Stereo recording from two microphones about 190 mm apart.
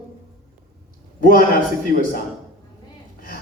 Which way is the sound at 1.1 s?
50° left (ahead or behind).